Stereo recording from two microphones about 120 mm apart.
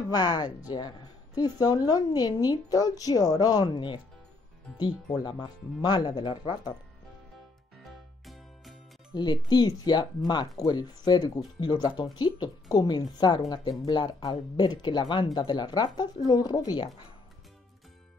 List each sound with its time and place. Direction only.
0.1 s a woman's voice: 35° left (ahead or behind)
5.2 s a woman's voice: 35° left (ahead or behind)
7.8 s music: centre (ahead or behind)
9.1 s a woman's voice: 35° left (ahead or behind)